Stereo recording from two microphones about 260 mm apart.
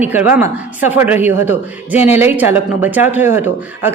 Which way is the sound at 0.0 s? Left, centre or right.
Centre.